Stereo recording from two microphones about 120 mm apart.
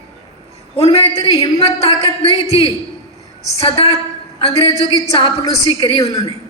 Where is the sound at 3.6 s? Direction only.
60° left (ahead or behind).